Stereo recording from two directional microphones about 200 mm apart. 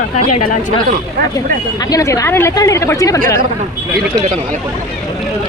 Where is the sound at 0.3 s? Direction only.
40° left (ahead or behind).